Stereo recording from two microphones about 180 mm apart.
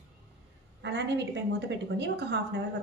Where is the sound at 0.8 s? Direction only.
75° right (ahead or behind).